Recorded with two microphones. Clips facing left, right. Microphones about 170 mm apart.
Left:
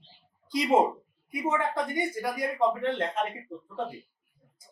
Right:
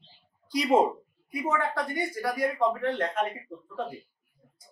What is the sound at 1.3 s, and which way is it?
Speech, 20° left (ahead or behind).